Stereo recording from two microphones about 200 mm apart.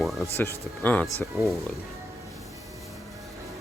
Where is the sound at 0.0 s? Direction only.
Centre (ahead or behind).